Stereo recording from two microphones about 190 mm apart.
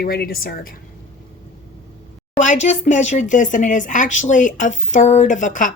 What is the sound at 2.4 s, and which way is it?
Speech, 40° left (ahead or behind).